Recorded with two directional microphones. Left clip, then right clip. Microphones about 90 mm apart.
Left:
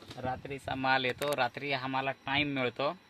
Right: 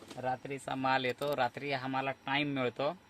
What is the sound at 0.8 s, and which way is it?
Speech, 15° left (ahead or behind).